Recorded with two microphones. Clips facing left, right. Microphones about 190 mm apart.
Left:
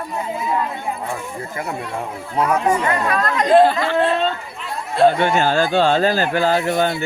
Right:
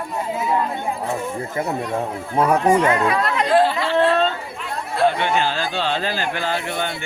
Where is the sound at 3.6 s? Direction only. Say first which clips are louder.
Left 3 dB; 50° left (ahead or behind).